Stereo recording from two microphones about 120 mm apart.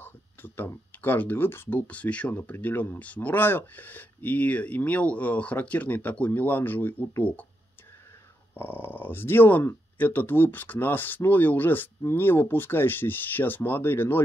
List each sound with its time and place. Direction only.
0.0 s speech: 20° left (ahead or behind)
8.5 s speech: 15° left (ahead or behind)